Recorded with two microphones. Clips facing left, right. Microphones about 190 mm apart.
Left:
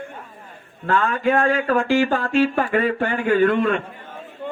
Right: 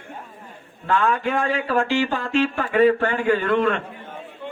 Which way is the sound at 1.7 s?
50° left (ahead or behind).